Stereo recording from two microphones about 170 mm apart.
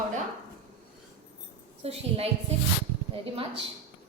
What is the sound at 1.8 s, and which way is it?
A woman's voice, 35° right (ahead or behind).